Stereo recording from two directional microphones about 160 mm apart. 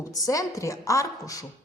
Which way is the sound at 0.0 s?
20° left (ahead or behind).